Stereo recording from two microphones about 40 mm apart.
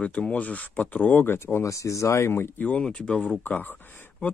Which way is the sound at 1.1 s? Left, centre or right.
Left.